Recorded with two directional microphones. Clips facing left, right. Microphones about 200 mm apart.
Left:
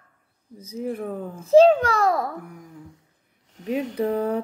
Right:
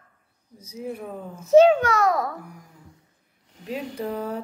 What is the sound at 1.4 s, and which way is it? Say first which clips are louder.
Speech: left 1 dB; 30° left (ahead or behind).